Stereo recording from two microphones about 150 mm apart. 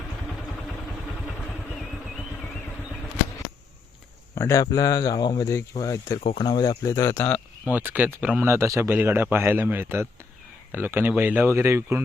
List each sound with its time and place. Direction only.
4.4 s speech: 20° left (ahead or behind)
6.1 s speech: 40° left (ahead or behind); by 7.4 s 10° left (ahead or behind)
7.6 s a man's voice: 10° right (ahead or behind)